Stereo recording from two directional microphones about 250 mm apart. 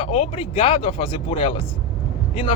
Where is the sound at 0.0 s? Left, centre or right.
Left.